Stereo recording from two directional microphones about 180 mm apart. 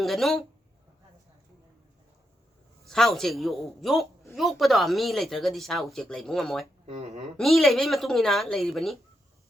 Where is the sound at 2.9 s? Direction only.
Centre (ahead or behind).